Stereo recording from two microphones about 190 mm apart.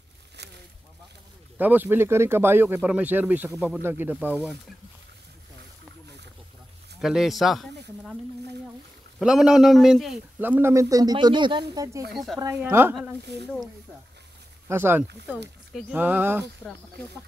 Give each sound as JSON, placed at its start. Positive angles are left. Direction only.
{"t": 0.4, "sound": "a sound", "side_deg": -65}
{"t": 1.6, "sound": "a man's voice", "side_deg": -10}
{"t": 7.0, "sound": "speech", "side_deg": 0}
{"t": 9.2, "sound": "a man's voice", "side_deg": -5}
{"t": 12.1, "sound": "speech", "side_deg": 0}
{"t": 12.4, "sound": "a man's voice", "side_deg": -15}
{"t": 13.3, "sound": "speech", "side_deg": -65}
{"t": 14.7, "sound": "a man's voice", "side_deg": -10}